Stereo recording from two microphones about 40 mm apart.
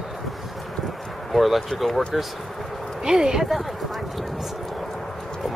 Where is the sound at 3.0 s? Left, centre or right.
Centre.